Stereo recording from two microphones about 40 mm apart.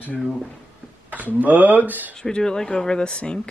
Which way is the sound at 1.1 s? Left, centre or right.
Right.